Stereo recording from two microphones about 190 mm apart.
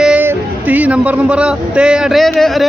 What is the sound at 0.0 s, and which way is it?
Speech, 10° right (ahead or behind).